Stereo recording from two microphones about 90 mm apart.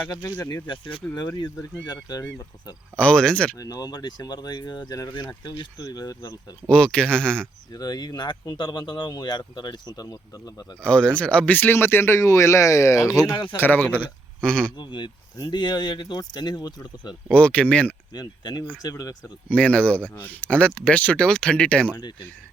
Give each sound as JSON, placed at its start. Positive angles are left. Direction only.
{"t": 0.7, "sound": "speech", "side_deg": 70}
{"t": 1.9, "sound": "speech", "side_deg": 45}
{"t": 2.9, "sound": "speech", "side_deg": 10}
{"t": 3.6, "sound": "speech", "side_deg": 45}
{"t": 6.7, "sound": "speech", "side_deg": 10}
{"t": 7.7, "sound": "speech", "side_deg": 45}
{"t": 10.8, "sound": "speech", "side_deg": 10}
{"t": 13.6, "sound": "speech", "side_deg": 20}
{"t": 14.8, "sound": "speech", "side_deg": 60}
{"t": 17.3, "sound": "speech", "side_deg": 15}
{"t": 18.1, "sound": "speech", "side_deg": 50}
{"t": 19.5, "sound": "speech", "side_deg": 15}